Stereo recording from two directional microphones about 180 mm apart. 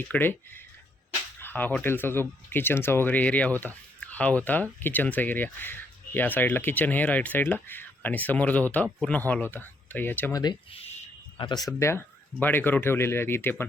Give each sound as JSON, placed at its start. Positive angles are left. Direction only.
{"t": 0.1, "sound": "speech", "side_deg": 10}
{"t": 10.4, "sound": "speech", "side_deg": 25}
{"t": 10.8, "sound": "a sound", "side_deg": 30}
{"t": 11.8, "sound": "speech", "side_deg": 15}